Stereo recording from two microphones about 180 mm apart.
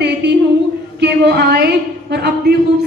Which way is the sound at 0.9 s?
70° right (ahead or behind).